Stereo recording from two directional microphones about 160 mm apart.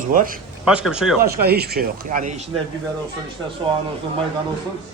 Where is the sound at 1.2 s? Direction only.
75° right (ahead or behind).